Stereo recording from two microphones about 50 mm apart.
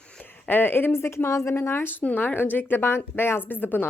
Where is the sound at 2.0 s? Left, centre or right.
Left.